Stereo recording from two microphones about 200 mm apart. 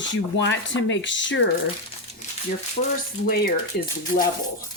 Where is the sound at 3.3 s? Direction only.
50° left (ahead or behind).